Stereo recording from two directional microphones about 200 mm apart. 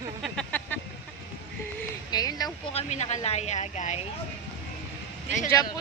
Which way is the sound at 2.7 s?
35° left (ahead or behind).